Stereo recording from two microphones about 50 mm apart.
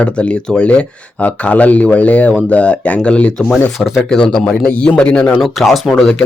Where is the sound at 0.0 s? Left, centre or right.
Left.